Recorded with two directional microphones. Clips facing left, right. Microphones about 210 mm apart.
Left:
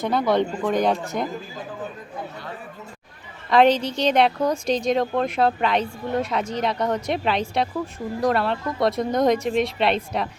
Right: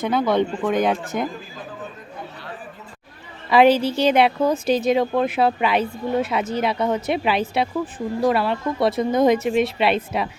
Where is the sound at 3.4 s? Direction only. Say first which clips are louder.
Right 2 dB; 5° right (ahead or behind).